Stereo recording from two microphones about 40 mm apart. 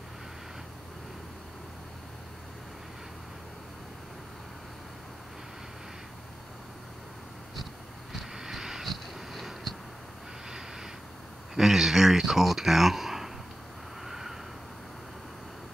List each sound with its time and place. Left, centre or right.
8.1 s vehicle: centre
8.8 s a sound: centre
11.5 s speech: centre
14.0 s vehicle: centre